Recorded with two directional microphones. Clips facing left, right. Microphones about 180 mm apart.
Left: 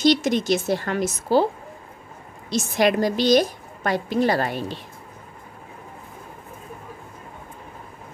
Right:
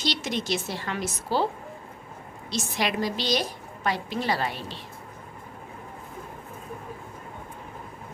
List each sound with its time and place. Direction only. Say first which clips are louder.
0.0 s a woman's voice: left 10 dB; 45° left (ahead or behind)
2.5 s a woman's voice: left 8 dB; 45° left (ahead or behind)